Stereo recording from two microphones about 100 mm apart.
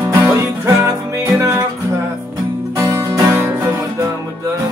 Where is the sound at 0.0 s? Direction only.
20° right (ahead or behind).